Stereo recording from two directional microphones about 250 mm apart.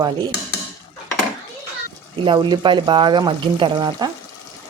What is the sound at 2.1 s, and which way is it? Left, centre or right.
Speech, centre.